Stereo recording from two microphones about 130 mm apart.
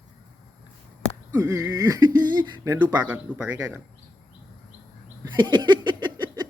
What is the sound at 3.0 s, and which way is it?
Speech, 10° right (ahead or behind).